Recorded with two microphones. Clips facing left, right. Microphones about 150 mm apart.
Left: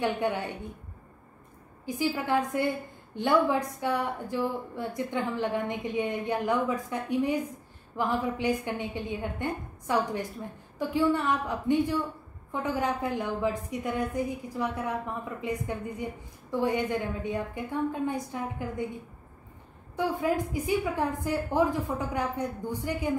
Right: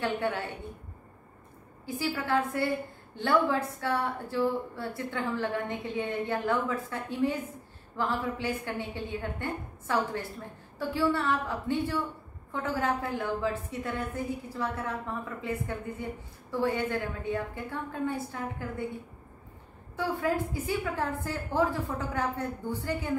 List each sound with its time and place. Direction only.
0.0 s a woman's voice: 15° left (ahead or behind)
1.9 s a woman's voice: 15° left (ahead or behind)
20.0 s a woman's voice: 15° left (ahead or behind)